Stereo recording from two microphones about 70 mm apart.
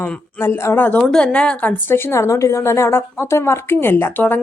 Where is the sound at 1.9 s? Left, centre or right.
Left.